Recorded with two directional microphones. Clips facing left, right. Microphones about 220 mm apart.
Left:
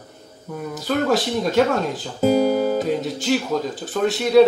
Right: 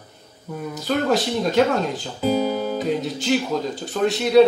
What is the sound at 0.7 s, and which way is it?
Speech, centre (ahead or behind).